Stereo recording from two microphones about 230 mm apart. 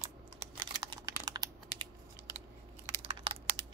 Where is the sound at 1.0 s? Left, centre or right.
Centre.